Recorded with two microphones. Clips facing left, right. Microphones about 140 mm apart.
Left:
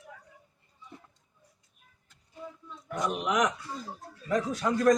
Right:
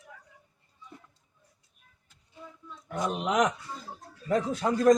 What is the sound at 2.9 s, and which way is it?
Speech, 30° right (ahead or behind).